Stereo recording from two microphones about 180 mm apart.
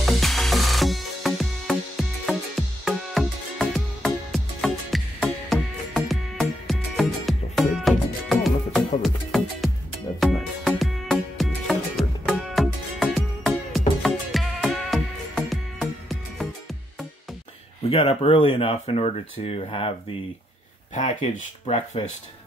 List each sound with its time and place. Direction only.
0.0 s music: centre (ahead or behind)
17.8 s speech: 35° left (ahead or behind)
20.9 s speech: 45° left (ahead or behind)